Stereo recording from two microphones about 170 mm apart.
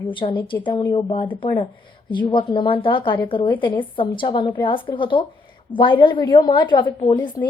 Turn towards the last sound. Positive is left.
turn(degrees=25)  # may be behind; listen again after turning